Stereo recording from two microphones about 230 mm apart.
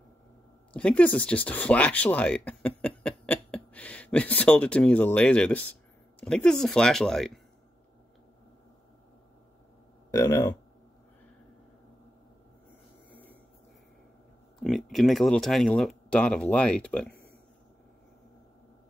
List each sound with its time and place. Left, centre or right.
0.7 s speech: centre
10.1 s speech: centre
14.6 s speech: centre